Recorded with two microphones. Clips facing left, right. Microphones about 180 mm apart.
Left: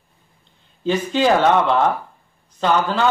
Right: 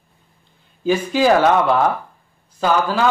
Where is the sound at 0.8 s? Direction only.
10° right (ahead or behind).